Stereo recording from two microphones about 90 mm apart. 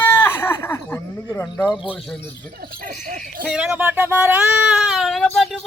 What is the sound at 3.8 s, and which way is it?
Speech, 25° right (ahead or behind).